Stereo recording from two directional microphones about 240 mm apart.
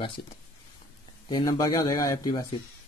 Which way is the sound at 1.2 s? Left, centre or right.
Centre.